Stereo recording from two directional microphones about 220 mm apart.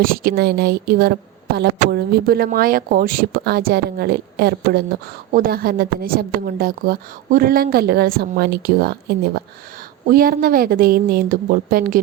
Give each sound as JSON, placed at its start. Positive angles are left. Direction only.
{"t": 0.0, "sound": "a woman's voice", "side_deg": -40}